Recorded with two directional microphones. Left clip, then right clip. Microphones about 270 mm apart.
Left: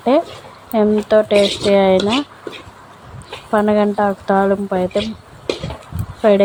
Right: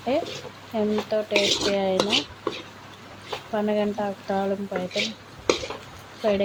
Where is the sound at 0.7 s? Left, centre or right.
Left.